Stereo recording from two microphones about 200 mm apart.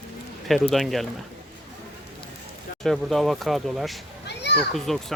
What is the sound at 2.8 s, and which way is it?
Speech, centre (ahead or behind).